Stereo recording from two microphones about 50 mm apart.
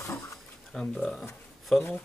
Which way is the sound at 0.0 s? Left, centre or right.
Left.